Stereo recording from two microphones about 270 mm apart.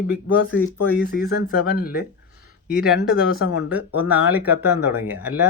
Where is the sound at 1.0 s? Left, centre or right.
Left.